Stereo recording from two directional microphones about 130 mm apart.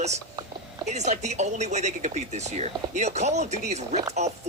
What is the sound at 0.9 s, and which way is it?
Speech, 60° right (ahead or behind).